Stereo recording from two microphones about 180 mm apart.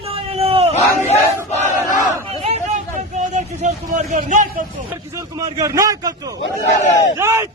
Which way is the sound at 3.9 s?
45° right (ahead or behind).